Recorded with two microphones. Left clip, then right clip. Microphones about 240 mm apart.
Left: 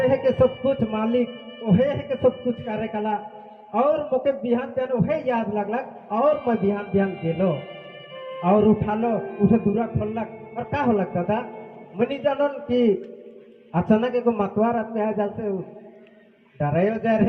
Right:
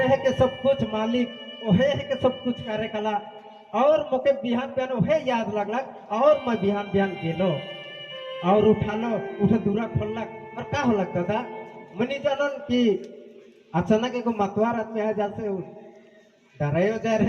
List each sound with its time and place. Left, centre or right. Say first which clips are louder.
0.0 s a man's voice: left 2 dB; left
16.6 s a man's voice: left 2 dB; left